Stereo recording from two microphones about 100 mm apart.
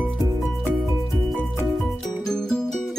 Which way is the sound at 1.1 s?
Centre (ahead or behind).